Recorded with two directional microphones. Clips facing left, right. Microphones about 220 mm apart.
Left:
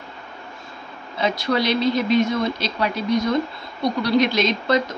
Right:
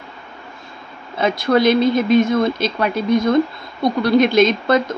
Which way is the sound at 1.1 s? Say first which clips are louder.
Right 5 dB; 50° right (ahead or behind).